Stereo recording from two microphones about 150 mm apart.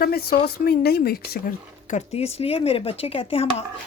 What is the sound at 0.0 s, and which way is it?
Speech, 90° left.